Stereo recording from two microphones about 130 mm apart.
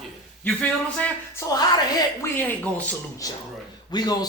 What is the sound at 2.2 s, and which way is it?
Speech, 15° left (ahead or behind).